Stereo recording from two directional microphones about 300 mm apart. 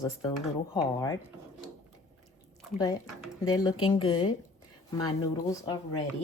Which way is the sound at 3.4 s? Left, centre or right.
Centre.